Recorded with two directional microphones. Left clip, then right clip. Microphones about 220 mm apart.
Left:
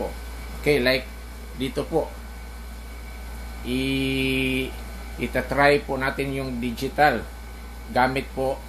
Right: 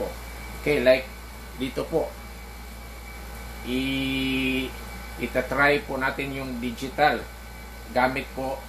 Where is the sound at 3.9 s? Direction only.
45° left (ahead or behind).